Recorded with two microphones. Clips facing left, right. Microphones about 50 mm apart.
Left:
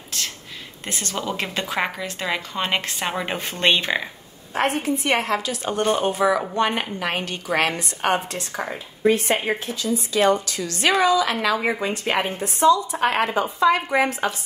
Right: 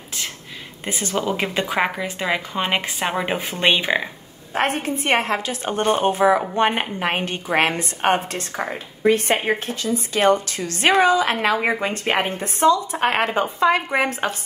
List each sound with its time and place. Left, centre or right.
0.8 s speech: centre
4.6 s a woman's voice: right